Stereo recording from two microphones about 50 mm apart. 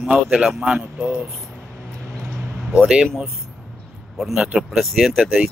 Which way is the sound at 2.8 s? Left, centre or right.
Centre.